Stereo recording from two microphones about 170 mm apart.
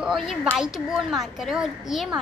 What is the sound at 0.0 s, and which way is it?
A child's voice, centre (ahead or behind).